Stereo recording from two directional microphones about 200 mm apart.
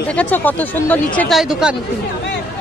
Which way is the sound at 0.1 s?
5° left (ahead or behind).